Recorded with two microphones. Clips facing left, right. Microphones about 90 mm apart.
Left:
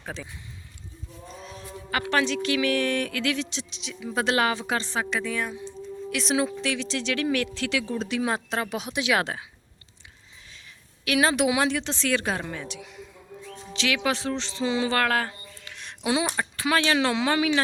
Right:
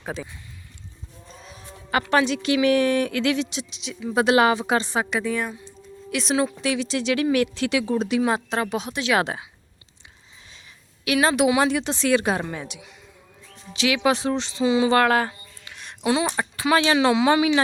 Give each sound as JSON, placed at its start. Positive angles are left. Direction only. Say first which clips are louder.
{"t": 1.3, "sound": "a sound", "louder": "left 3 dB", "side_deg": 0}
{"t": 1.9, "sound": "a woman's voice", "louder": "right 4 dB", "side_deg": -20}
{"t": 8.2, "sound": "a woman's voice", "louder": "right 4 dB", "side_deg": 0}
{"t": 8.9, "sound": "speech", "louder": "right 1 dB", "side_deg": 15}
{"t": 9.2, "sound": "a woman's voice", "louder": "right 3 dB", "side_deg": -15}
{"t": 11.0, "sound": "a woman's voice", "louder": "right 3 dB", "side_deg": -5}
{"t": 11.7, "sound": "a woman's voice", "louder": "right 5 dB", "side_deg": -10}
{"t": 14.6, "sound": "a woman's voice", "louder": "right 6 dB", "side_deg": -5}
{"t": 14.8, "sound": "speech", "louder": "right 6 dB", "side_deg": -20}
{"t": 15.7, "sound": "a sound", "louder": "right 2 dB", "side_deg": -5}
{"t": 16.2, "sound": "a woman's voice", "louder": "right 3 dB", "side_deg": -15}